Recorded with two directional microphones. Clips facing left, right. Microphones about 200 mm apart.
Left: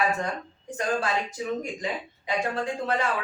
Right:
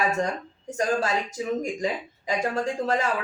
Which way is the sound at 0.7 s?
40° right (ahead or behind).